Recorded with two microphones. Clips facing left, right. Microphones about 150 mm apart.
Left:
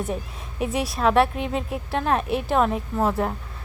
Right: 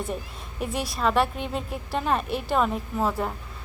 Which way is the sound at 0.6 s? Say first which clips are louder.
Left 4 dB; centre (ahead or behind).